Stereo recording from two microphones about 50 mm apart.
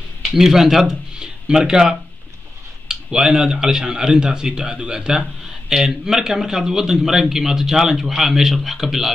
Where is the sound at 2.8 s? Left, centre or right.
Centre.